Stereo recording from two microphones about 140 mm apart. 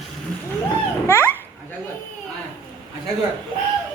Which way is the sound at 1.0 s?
15° left (ahead or behind).